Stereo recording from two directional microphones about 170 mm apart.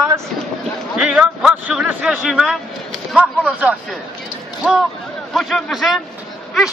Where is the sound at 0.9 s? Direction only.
5° right (ahead or behind).